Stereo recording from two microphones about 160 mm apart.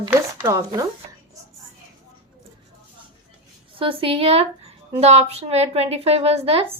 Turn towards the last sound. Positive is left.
turn(degrees=-40)  # may be behind; listen again after turning